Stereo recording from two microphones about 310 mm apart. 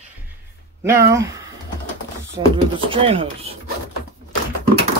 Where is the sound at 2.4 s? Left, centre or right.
Centre.